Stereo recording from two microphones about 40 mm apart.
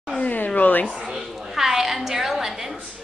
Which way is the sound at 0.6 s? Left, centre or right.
Left.